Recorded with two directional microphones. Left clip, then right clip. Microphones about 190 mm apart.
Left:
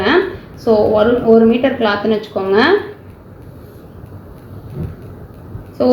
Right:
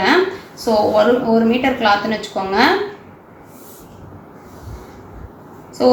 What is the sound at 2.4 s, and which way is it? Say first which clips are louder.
Speech: left 3 dB; 40° left (ahead or behind).